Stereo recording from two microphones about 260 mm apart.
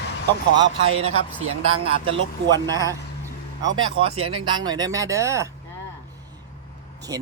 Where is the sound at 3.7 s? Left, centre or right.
Right.